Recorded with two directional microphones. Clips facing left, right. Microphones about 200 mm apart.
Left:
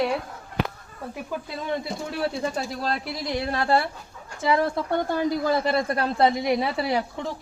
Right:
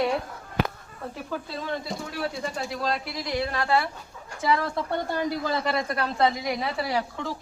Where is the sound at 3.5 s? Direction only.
40° left (ahead or behind).